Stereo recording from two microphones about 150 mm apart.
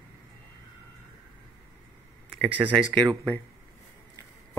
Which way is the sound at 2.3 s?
10° right (ahead or behind).